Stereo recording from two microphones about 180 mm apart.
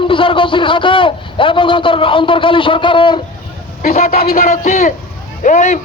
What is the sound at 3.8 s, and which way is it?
Speech, 50° left (ahead or behind).